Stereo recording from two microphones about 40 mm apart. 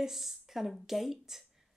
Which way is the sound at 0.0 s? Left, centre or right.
Centre.